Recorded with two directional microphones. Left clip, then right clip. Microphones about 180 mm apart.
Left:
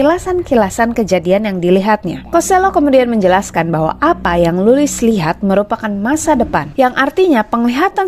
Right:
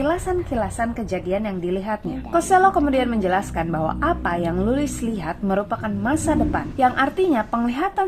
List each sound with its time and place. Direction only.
0.0 s a woman's voice: 40° left (ahead or behind)